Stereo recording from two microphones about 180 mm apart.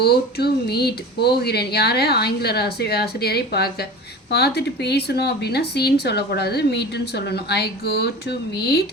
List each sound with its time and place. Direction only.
0.0 s speech: 60° left (ahead or behind)